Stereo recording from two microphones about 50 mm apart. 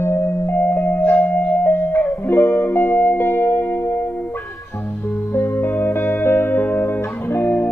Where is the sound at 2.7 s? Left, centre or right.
Left.